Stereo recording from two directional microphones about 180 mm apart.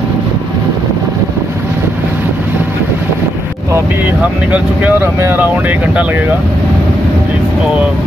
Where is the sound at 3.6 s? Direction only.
15° right (ahead or behind).